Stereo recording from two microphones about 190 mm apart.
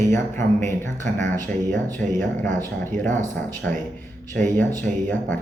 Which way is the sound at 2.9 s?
40° right (ahead or behind).